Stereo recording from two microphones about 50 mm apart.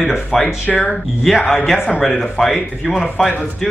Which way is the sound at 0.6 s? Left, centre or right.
Left.